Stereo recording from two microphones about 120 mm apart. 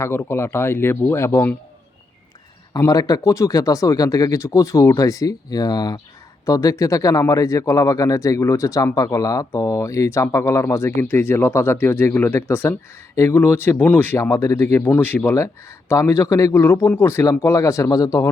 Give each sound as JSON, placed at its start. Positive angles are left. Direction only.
{"t": 0.0, "sound": "speech", "side_deg": 20}
{"t": 2.7, "sound": "speech", "side_deg": 30}